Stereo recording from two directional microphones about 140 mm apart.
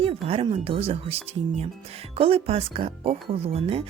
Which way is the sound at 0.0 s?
45° right (ahead or behind).